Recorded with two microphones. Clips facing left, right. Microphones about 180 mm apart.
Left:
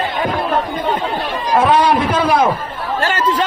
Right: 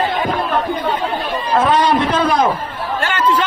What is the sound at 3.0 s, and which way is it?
Chatter, 40° left (ahead or behind).